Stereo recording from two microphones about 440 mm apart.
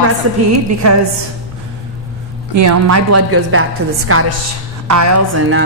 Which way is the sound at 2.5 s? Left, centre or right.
Right.